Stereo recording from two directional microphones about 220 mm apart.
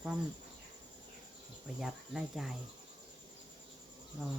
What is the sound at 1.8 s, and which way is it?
Speech, centre (ahead or behind).